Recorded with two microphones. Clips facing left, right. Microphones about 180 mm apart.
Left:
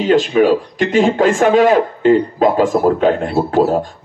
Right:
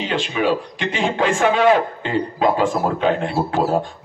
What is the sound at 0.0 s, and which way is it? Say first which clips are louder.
A man's voice: left 9 dB; 45° left (ahead or behind).